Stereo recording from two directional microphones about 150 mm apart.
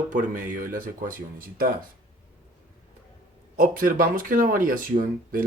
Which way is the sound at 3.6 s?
65° right (ahead or behind).